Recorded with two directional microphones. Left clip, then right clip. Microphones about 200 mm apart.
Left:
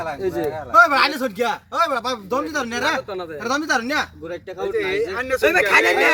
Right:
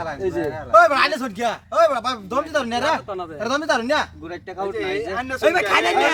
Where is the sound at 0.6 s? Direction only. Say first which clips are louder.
Even; 30° right (ahead or behind).